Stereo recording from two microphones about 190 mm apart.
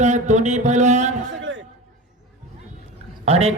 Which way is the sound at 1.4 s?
85° right.